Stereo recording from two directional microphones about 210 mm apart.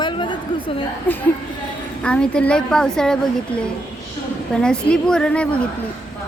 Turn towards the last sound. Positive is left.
turn(degrees=5)  # may be behind; listen again after turning